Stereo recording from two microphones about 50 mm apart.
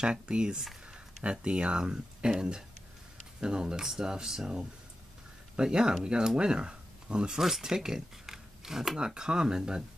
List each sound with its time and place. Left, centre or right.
0.0 s speech: centre
7.3 s speech: centre